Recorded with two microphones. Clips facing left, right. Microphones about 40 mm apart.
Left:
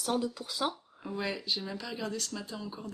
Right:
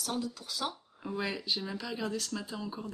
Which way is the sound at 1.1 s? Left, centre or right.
Centre.